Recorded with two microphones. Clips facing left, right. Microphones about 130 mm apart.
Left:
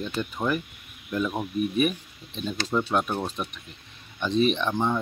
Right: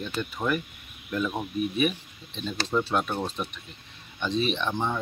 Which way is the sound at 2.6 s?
Centre (ahead or behind).